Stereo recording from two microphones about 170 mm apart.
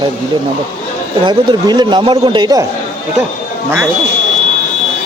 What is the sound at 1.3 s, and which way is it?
A man's voice, 25° right (ahead or behind).